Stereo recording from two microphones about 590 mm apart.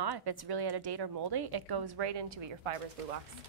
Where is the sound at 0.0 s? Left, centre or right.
Right.